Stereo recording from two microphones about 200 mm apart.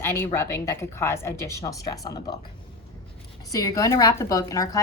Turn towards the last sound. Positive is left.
turn(degrees=15)  # may be behind; listen again after turning